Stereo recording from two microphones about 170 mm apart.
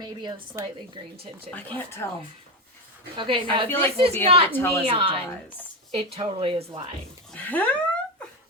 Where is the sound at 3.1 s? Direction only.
30° right (ahead or behind).